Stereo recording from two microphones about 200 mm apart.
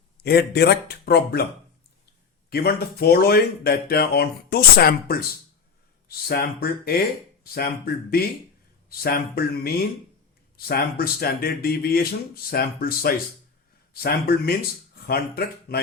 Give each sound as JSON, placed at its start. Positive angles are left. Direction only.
{"t": 0.2, "sound": "speech", "side_deg": 55}
{"t": 2.5, "sound": "speech", "side_deg": 50}
{"t": 8.9, "sound": "speech", "side_deg": 50}